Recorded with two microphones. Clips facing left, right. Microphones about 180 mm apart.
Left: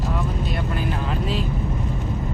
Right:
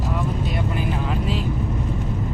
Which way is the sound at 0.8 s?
15° right (ahead or behind).